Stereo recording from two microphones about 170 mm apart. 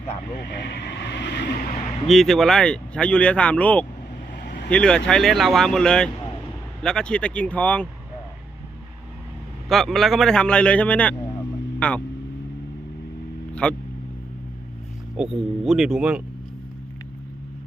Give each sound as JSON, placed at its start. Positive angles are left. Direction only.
{"t": 0.6, "sound": "vehicle", "side_deg": 85}
{"t": 2.0, "sound": "speech", "side_deg": 0}
{"t": 4.4, "sound": "vehicle", "side_deg": 65}
{"t": 4.7, "sound": "speech", "side_deg": 5}
{"t": 9.6, "sound": "speech", "side_deg": 0}
{"t": 13.5, "sound": "vehicle", "side_deg": 5}
{"t": 15.1, "sound": "speech", "side_deg": -5}